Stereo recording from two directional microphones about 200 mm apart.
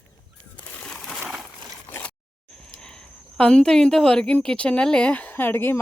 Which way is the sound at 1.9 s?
10° left (ahead or behind).